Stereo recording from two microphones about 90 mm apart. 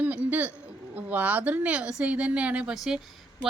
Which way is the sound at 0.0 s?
15° right (ahead or behind).